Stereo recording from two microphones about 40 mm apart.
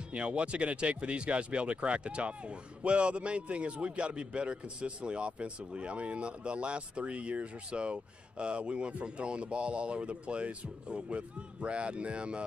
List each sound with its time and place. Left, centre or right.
0.1 s speech: right